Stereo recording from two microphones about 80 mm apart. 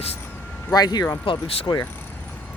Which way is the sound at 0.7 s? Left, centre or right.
Left.